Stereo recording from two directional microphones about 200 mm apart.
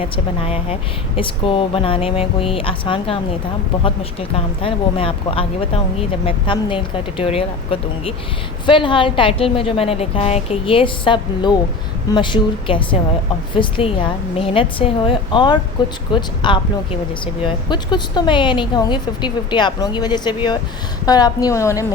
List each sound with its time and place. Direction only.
0.0 s a woman's voice: 30° left (ahead or behind); by 21.8 s 15° left (ahead or behind)